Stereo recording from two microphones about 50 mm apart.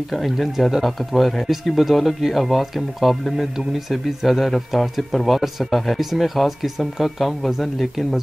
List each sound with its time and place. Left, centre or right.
0.1 s speech: centre